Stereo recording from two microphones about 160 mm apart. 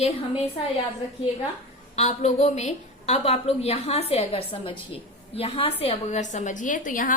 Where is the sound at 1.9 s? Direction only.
45° left (ahead or behind).